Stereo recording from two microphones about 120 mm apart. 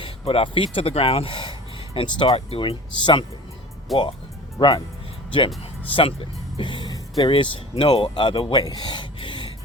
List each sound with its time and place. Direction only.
0.0 s speech: 50° left (ahead or behind)
3.9 s speech: centre (ahead or behind)
5.9 s speech: 50° left (ahead or behind)
8.6 s gasp: 35° left (ahead or behind)